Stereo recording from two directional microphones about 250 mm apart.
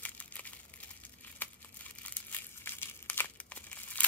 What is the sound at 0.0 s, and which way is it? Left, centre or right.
Crumpling, centre.